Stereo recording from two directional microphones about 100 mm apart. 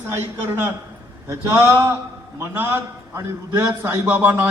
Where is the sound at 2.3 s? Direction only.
20° right (ahead or behind).